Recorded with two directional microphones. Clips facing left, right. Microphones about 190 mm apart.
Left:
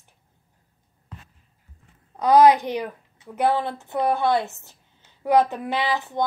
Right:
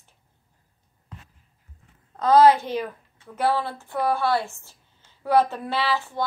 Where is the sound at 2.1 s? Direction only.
15° left (ahead or behind).